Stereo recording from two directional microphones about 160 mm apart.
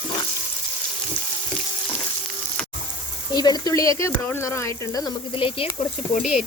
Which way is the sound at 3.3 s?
25° left (ahead or behind).